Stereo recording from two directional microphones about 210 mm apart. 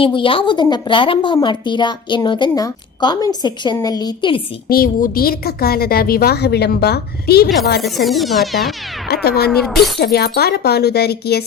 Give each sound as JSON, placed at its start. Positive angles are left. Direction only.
{"t": 0.0, "sound": "a woman's voice", "side_deg": 25}
{"t": 4.7, "sound": "a woman's voice", "side_deg": 45}
{"t": 7.8, "sound": "speech", "side_deg": 0}
{"t": 9.0, "sound": "a woman's voice", "side_deg": 50}